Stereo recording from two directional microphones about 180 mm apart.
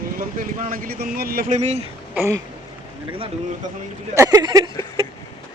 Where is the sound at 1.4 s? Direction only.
40° right (ahead or behind).